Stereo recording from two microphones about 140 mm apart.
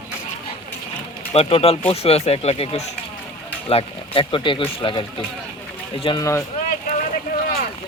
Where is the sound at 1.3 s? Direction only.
45° left (ahead or behind).